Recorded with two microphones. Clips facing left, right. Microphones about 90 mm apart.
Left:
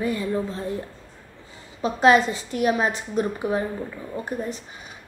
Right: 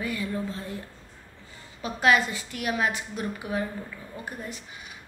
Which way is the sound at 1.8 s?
30° left (ahead or behind).